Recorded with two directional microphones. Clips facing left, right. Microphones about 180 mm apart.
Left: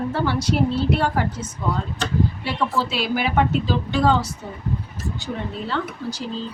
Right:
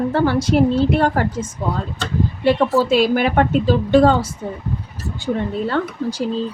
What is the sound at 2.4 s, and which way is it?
A woman's voice, 50° right (ahead or behind).